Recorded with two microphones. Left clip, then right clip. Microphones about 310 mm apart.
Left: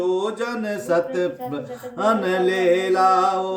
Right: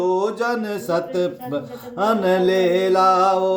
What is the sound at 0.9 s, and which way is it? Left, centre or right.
Mantra, centre.